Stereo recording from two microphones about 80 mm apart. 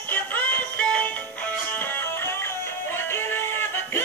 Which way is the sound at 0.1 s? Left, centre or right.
Left.